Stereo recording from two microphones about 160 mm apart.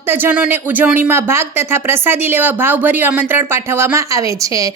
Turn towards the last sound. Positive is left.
turn(degrees=-20)  # may be behind; listen again after turning